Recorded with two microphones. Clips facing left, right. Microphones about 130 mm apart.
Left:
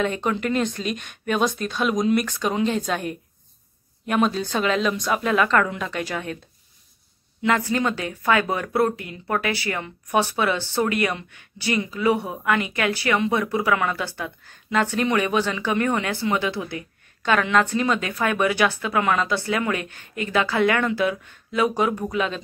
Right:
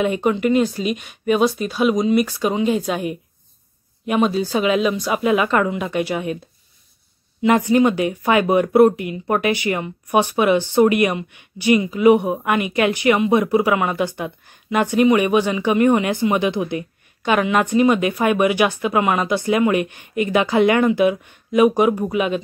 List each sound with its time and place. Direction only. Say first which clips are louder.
0.0 s speech: right 5 dB; 10° right (ahead or behind)
7.4 s speech: right 7 dB; 20° right (ahead or behind)